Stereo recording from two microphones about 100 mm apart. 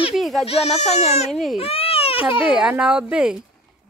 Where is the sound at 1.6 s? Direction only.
70° left (ahead or behind).